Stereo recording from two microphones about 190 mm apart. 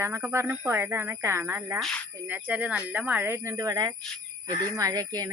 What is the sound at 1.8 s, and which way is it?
Speech, centre (ahead or behind).